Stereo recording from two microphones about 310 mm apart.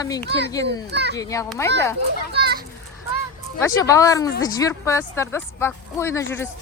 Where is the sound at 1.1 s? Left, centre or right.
Centre.